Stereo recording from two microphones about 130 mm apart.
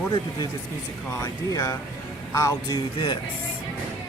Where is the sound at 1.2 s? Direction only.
30° left (ahead or behind).